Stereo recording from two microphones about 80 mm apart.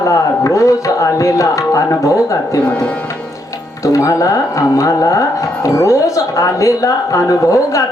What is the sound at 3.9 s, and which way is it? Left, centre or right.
Speech, left.